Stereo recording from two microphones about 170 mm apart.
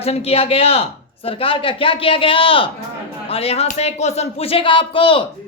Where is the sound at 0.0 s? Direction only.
35° left (ahead or behind).